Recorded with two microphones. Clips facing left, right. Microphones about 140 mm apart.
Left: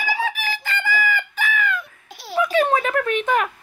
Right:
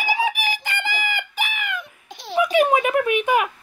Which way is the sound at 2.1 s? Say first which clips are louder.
Right 1 dB; 5° left (ahead or behind).